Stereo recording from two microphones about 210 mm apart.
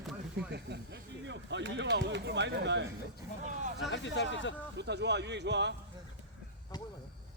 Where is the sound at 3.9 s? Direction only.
60° left (ahead or behind).